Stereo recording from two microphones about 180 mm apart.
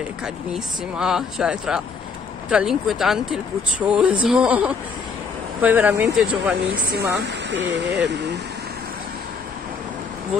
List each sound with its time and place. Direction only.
0.2 s speech: 5° right (ahead or behind)
6.7 s speech: 60° right (ahead or behind)